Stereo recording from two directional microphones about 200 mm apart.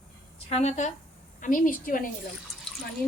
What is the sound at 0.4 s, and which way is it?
A woman's voice, 35° left (ahead or behind).